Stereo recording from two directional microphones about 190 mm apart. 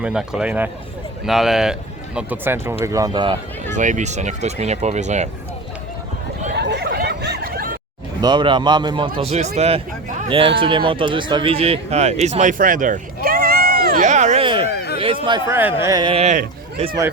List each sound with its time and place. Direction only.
0.0 s a man's voice: 5° right (ahead or behind); by 3.3 s 25° right (ahead or behind)
3.8 s speech: 40° right (ahead or behind)
6.6 s chatter: 60° right (ahead or behind)
8.2 s a man's voice: 25° right (ahead or behind); by 14.4 s 40° right (ahead or behind)
14.4 s a sound: 25° right (ahead or behind)
15.4 s a man's voice: 10° right (ahead or behind); by 16.5 s 40° right (ahead or behind)